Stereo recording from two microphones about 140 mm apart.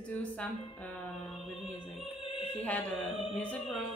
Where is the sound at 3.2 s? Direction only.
40° left (ahead or behind).